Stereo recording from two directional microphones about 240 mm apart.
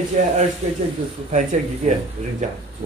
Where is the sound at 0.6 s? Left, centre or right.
Right.